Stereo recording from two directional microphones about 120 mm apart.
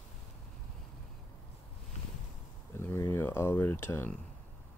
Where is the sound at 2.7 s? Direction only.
20° left (ahead or behind).